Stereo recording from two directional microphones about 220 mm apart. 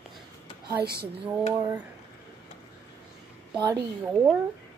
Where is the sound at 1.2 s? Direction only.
10° right (ahead or behind).